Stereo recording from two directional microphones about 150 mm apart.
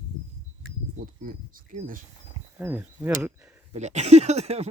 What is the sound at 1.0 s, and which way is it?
Speech, 70° right (ahead or behind).